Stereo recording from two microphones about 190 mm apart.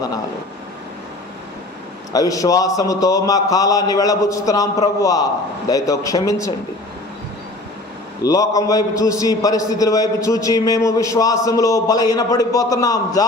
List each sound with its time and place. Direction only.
2.1 s a man's voice: 20° left (ahead or behind)
8.2 s a man's voice: 20° left (ahead or behind)